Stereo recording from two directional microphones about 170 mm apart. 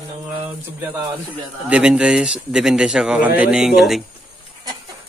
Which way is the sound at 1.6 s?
5° right (ahead or behind).